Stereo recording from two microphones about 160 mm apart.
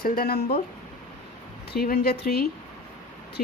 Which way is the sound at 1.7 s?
70° left (ahead or behind).